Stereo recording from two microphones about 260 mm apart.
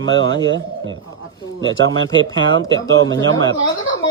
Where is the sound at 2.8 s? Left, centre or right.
Right.